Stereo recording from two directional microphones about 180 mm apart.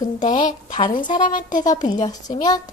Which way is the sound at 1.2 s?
45° left (ahead or behind).